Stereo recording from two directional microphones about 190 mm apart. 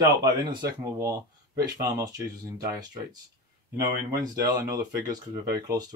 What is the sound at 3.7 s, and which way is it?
Speech, 20° right (ahead or behind).